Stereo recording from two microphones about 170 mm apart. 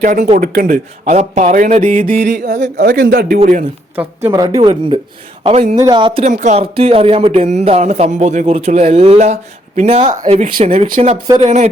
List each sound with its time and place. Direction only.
0.0 s a man's voice: 50° right (ahead or behind)
2.8 s a man's voice: 65° right (ahead or behind)
3.9 s a woman's voice: 15° right (ahead or behind)
5.4 s speech: 40° right (ahead or behind)
5.8 s a woman's voice: 30° right (ahead or behind)
6.2 s speech: 45° right (ahead or behind)